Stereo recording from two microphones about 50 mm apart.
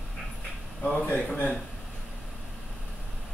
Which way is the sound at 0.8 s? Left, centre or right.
Left.